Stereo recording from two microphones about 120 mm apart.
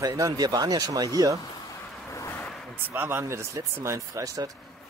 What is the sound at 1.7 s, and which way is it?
Vehicle, 25° left (ahead or behind).